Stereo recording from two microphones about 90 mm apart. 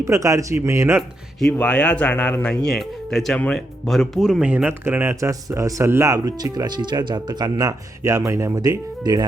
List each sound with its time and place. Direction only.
0.0 s speech: 35° right (ahead or behind)
1.5 s speech: 10° left (ahead or behind)
3.3 s speech: 15° left (ahead or behind)
3.8 s speech: centre (ahead or behind); by 5.3 s 25° right (ahead or behind)
5.3 s speech: 40° right (ahead or behind)
8.0 s speech: 35° right (ahead or behind)